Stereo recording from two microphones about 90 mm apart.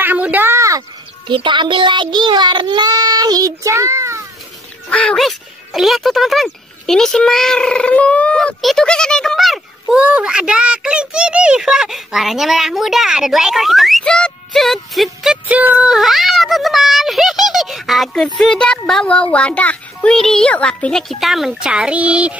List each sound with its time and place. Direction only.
0.0 s a sound: 20° right (ahead or behind)
0.6 s a sound: 40° right (ahead or behind)
1.2 s speech: 65° right (ahead or behind); by 4.2 s 35° right (ahead or behind)
4.8 s speech: 10° left (ahead or behind)
5.2 s a child's voice: centre (ahead or behind)
9.9 s a child's voice: 10° right (ahead or behind)
15.4 s a child's voice: 15° right (ahead or behind)